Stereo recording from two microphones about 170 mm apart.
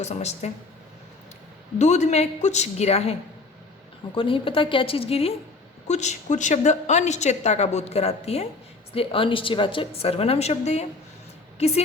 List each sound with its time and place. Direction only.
0.0 s a woman's voice: 40° left (ahead or behind)
1.8 s a woman's voice: 40° left (ahead or behind)